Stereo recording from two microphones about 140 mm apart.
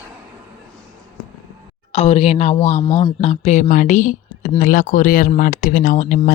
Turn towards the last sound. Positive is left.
turn(degrees=70)  # may be behind; listen again after turning